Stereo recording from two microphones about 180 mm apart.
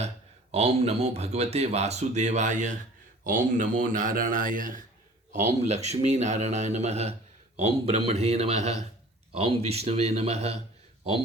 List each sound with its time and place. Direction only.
0.5 s a man's voice: 35° right (ahead or behind)
5.6 s speech: 40° right (ahead or behind)